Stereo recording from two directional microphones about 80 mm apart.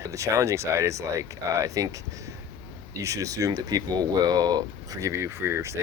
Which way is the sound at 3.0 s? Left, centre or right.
Right.